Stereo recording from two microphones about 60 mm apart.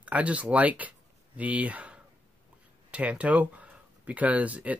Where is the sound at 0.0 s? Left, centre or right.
Right.